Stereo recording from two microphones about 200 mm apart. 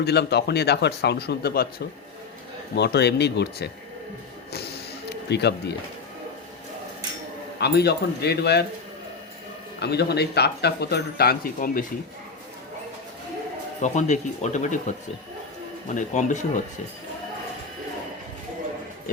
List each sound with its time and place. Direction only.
0.0 s speech: 55° left (ahead or behind)
2.7 s speech: 55° left (ahead or behind)
4.5 s a sound: 55° left (ahead or behind)
7.6 s speech: 55° left (ahead or behind)
9.8 s speech: 55° left (ahead or behind)
13.8 s speech: 35° left (ahead or behind)
16.0 s speech: 40° left (ahead or behind)